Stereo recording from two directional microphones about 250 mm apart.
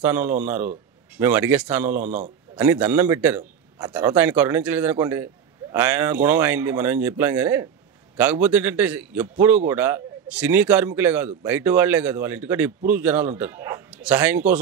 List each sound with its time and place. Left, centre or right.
0.0 s a man's voice: centre
2.0 s a man's voice: right
2.5 s a man's voice: centre